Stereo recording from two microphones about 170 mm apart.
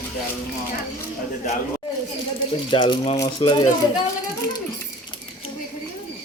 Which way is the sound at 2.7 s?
30° left (ahead or behind).